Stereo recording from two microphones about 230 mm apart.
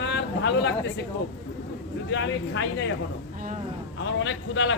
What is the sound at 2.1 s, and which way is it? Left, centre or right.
Speech, left.